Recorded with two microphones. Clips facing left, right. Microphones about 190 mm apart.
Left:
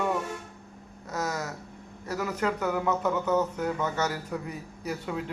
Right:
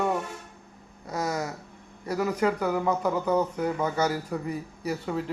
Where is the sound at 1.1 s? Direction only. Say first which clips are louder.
Right 2 dB; 10° right (ahead or behind).